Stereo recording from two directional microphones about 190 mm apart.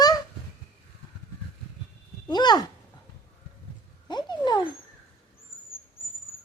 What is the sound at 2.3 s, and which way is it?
Speech, 20° left (ahead or behind).